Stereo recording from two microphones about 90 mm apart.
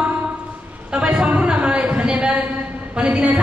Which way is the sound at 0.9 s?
10° right (ahead or behind).